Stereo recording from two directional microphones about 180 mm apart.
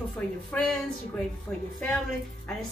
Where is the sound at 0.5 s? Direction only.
10° left (ahead or behind).